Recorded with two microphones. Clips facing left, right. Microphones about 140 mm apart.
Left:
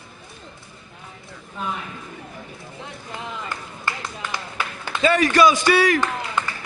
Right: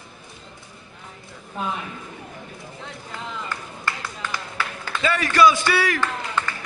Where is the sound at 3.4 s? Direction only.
20° left (ahead or behind).